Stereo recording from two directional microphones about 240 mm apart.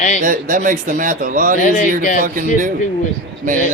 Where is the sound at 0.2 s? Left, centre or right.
Right.